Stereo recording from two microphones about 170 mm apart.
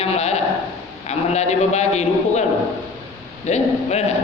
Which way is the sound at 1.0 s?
40° left (ahead or behind).